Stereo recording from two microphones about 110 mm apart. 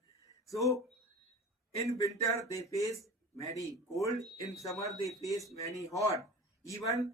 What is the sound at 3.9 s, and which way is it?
Speech, 30° left (ahead or behind).